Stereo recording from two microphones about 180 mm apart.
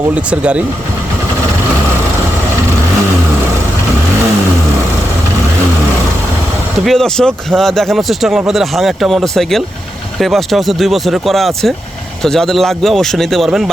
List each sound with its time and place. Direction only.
0.3 s speech: 5° right (ahead or behind)
6.8 s speech: 5° left (ahead or behind)